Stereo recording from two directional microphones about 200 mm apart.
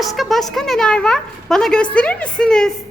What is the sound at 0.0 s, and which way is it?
A woman's voice, centre (ahead or behind).